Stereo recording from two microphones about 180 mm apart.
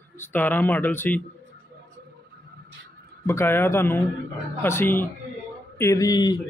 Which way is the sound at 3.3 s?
15° left (ahead or behind).